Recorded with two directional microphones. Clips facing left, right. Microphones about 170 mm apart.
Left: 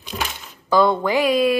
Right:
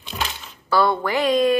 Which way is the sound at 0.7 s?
15° left (ahead or behind).